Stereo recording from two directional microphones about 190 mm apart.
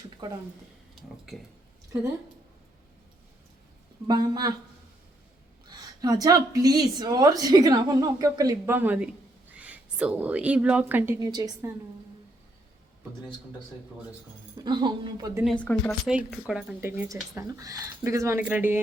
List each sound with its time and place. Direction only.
4.0 s a woman's voice: 20° right (ahead or behind)
5.6 s a woman's voice: 20° right (ahead or behind)
14.6 s a woman's voice: 25° right (ahead or behind)
15.4 s speech: 5° left (ahead or behind)
17.3 s speech: 20° right (ahead or behind)